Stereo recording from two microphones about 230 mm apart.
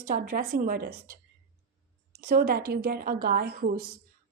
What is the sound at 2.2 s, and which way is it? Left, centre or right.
A woman's voice, right.